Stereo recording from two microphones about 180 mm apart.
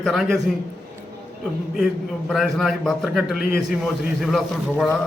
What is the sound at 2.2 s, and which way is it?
A man's voice, centre (ahead or behind).